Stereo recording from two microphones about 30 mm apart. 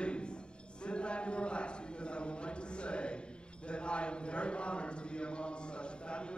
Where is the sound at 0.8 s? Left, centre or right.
Left.